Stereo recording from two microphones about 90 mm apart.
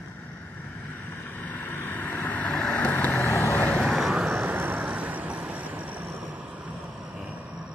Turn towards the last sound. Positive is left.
turn(degrees=-15)  # may be behind; listen again after turning